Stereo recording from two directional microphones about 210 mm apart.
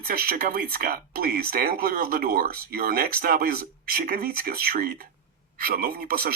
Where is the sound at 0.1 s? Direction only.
45° right (ahead or behind).